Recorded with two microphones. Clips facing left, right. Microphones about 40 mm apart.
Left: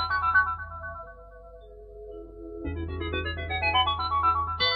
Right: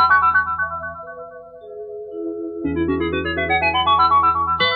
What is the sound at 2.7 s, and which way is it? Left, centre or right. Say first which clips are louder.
Music: right 17 dB; right.